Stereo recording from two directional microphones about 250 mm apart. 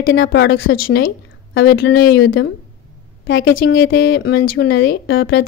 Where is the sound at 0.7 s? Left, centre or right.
Left.